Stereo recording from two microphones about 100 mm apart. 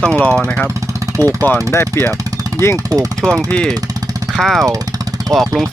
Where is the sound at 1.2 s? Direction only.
25° left (ahead or behind).